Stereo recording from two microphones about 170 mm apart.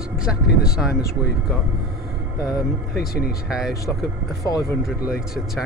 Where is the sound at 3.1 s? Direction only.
65° left (ahead or behind).